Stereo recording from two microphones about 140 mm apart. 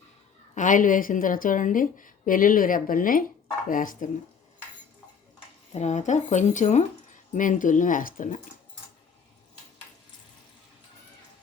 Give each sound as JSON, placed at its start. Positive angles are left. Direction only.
{"t": 0.5, "sound": "a woman's voice", "side_deg": 65}
{"t": 5.7, "sound": "speech", "side_deg": 55}